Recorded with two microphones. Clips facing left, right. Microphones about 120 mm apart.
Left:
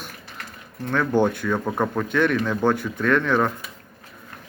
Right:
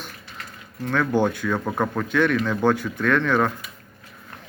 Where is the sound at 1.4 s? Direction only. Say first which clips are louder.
Left 1 dB; 15° left (ahead or behind).